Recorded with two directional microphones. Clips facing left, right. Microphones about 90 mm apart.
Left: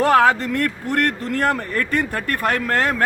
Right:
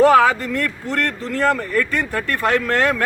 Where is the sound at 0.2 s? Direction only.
65° left (ahead or behind).